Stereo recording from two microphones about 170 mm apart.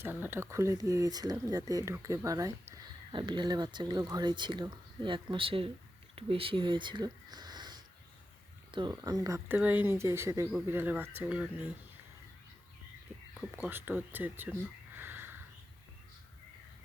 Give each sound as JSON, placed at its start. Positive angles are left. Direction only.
{"t": 0.0, "sound": "speech", "side_deg": -15}
{"t": 13.7, "sound": "speech", "side_deg": -10}
{"t": 14.9, "sound": "sniff", "side_deg": -10}